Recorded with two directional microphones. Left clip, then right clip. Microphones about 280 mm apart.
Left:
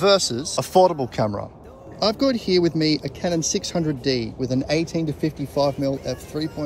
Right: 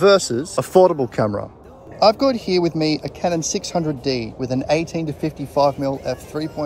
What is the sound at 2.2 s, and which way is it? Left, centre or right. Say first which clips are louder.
Speech: right 2 dB; centre.